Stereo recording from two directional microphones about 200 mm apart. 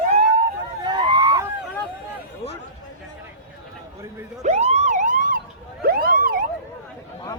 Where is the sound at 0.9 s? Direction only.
20° right (ahead or behind).